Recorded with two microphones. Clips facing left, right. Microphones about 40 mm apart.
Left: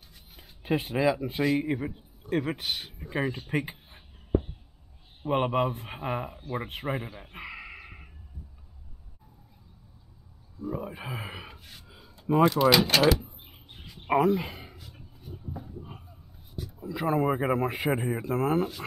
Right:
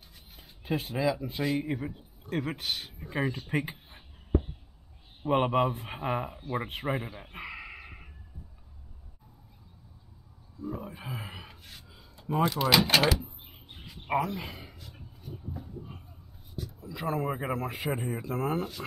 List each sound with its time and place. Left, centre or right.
0.6 s speech: left
1.3 s a man's voice: centre
10.6 s a sound: centre
17.8 s speech: centre